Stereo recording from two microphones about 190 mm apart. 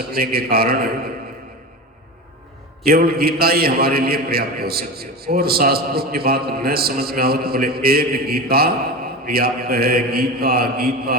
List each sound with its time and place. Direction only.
0.1 s a man's voice: 55° right (ahead or behind)
2.8 s a man's voice: 55° right (ahead or behind)